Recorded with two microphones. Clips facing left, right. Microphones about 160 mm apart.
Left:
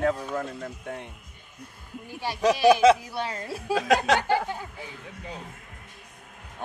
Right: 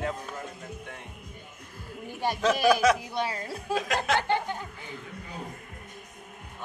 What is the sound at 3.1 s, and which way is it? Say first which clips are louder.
Speech: right 1 dB; 15° right (ahead or behind).